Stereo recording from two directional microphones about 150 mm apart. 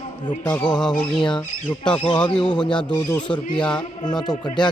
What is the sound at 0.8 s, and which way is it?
Squawk, 5° left (ahead or behind).